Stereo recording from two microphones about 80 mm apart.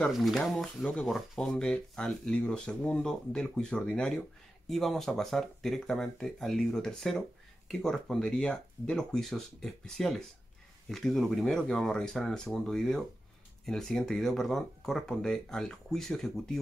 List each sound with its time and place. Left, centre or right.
0.1 s speech: centre